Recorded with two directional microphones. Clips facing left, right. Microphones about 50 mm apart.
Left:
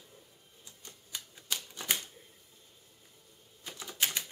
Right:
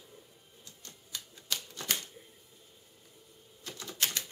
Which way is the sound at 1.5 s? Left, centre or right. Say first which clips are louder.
Even; centre.